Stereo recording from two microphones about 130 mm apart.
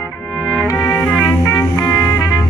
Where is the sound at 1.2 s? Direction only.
25° left (ahead or behind).